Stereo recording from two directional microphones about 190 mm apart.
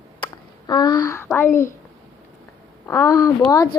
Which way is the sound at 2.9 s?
15° left (ahead or behind).